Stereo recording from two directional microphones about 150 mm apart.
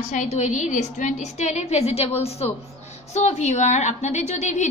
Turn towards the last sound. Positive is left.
turn(degrees=50)  # may be behind; listen again after turning